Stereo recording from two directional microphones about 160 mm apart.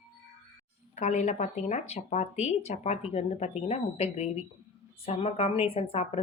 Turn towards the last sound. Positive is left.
turn(degrees=40)  # may be behind; listen again after turning